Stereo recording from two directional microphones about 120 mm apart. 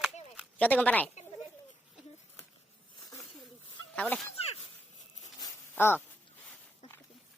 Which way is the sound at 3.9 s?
10° left (ahead or behind).